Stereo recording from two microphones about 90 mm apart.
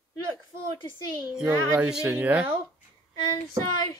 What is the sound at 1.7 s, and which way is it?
Speech, 10° right (ahead or behind).